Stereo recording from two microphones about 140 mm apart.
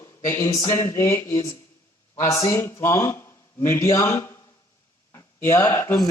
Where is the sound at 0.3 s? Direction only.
20° left (ahead or behind).